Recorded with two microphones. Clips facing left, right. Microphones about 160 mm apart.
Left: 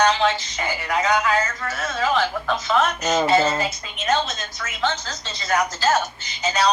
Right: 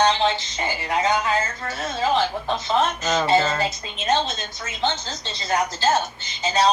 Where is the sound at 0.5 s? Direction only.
25° right (ahead or behind).